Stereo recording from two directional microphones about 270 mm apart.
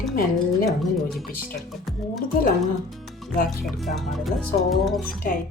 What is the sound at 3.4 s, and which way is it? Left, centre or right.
Speech, centre.